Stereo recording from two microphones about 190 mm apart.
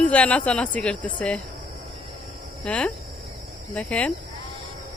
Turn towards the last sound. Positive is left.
turn(degrees=5)  # may be behind; listen again after turning